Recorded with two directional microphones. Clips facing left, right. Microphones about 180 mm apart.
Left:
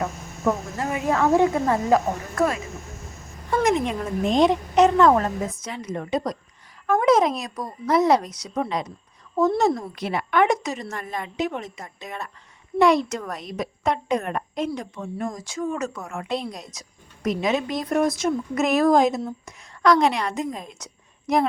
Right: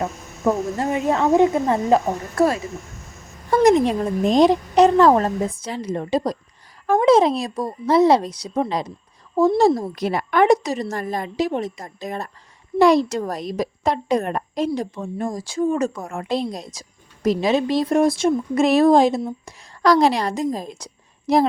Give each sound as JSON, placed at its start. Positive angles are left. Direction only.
{"t": 0.0, "sound": "a woman's voice", "side_deg": -30}